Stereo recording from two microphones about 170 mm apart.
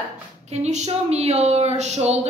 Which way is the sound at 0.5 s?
40° right (ahead or behind).